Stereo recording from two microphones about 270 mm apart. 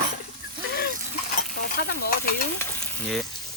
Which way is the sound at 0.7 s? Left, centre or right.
Left.